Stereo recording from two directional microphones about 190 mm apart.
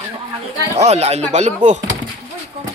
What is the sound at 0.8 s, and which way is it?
Speech, 35° right (ahead or behind).